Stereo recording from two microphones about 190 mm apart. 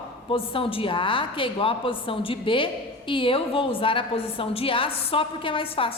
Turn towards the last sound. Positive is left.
turn(degrees=25)  # may be behind; listen again after turning